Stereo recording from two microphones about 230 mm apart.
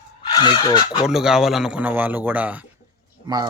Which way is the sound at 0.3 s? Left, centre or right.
Centre.